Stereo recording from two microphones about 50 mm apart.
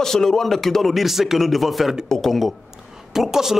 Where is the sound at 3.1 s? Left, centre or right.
Centre.